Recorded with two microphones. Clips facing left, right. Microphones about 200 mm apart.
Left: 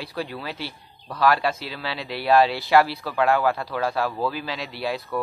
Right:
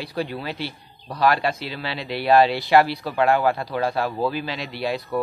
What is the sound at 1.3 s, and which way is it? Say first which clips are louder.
Speech: right 1 dB; 5° left (ahead or behind).